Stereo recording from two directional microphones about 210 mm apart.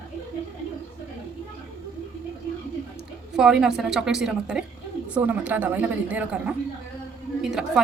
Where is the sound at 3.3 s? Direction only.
5° right (ahead or behind).